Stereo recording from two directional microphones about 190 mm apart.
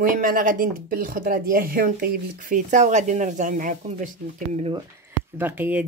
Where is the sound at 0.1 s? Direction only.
45° right (ahead or behind).